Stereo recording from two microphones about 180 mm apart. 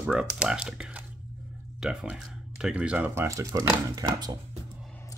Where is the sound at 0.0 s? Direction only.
5° right (ahead or behind); by 4.4 s 20° right (ahead or behind).